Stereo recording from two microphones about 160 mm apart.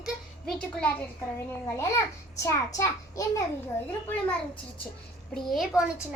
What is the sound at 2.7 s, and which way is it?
Speech, 20° left (ahead or behind).